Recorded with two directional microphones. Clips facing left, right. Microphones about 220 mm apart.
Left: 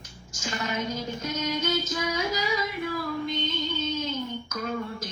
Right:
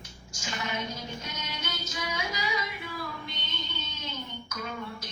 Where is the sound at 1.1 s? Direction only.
45° left (ahead or behind).